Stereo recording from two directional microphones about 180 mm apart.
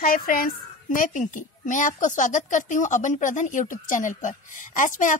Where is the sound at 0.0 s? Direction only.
50° left (ahead or behind).